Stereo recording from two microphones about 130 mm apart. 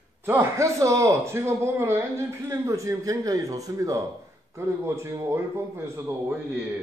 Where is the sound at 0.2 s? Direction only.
20° right (ahead or behind).